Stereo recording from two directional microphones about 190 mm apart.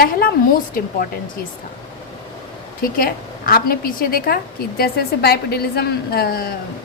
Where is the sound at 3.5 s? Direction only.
50° left (ahead or behind).